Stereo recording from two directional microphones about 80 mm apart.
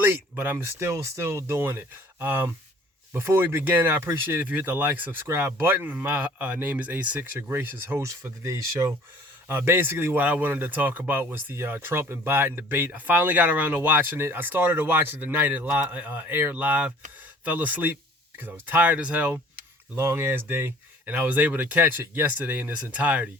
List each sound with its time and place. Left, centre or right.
0.0 s speech: right
8.0 s speech: right
9.5 s speech: right
20.0 s speech: right; by 23.3 s centre